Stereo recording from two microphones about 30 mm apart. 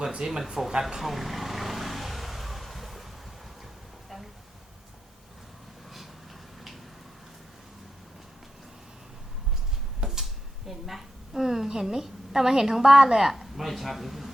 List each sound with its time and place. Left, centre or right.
0.2 s speech: centre
1.1 s vehicle: centre
10.0 s drawer open or close: right
10.7 s a sound: centre
12.0 s a woman's voice: centre
13.1 s speech: centre